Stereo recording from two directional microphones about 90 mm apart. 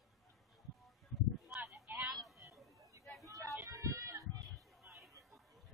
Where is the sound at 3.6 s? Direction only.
40° right (ahead or behind).